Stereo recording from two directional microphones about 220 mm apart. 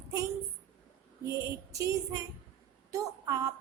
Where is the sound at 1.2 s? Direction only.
15° right (ahead or behind).